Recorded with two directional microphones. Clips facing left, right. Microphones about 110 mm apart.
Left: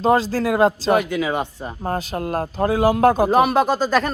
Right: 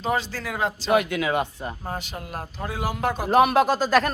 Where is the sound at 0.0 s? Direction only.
40° left (ahead or behind).